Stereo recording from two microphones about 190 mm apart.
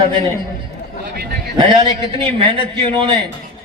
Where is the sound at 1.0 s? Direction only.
55° right (ahead or behind).